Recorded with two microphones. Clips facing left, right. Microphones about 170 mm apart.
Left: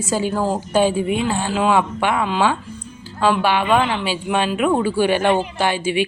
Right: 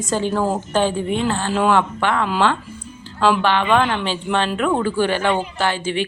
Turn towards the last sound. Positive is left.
turn(degrees=15)  # may be behind; listen again after turning